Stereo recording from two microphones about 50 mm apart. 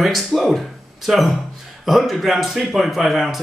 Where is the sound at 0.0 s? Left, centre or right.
Centre.